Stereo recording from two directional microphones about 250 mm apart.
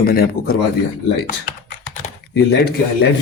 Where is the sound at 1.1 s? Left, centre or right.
Left.